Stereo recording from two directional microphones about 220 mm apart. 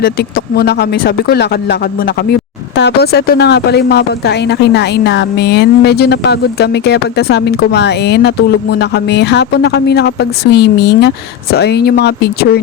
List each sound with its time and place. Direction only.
0.0 s speech: 45° left (ahead or behind)